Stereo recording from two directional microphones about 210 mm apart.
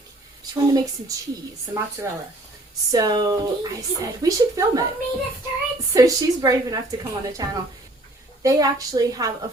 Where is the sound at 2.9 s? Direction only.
20° right (ahead or behind).